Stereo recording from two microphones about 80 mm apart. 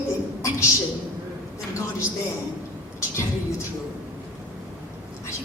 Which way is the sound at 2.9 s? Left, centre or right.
Left.